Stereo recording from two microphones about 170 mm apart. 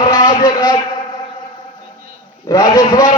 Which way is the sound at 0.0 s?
20° left (ahead or behind).